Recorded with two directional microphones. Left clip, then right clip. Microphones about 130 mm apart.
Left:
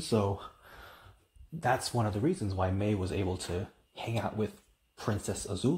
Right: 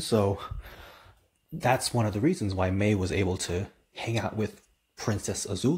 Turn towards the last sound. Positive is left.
turn(degrees=-25)  # may be behind; listen again after turning